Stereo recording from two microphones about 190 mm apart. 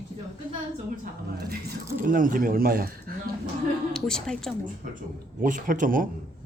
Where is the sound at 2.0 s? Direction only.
45° right (ahead or behind).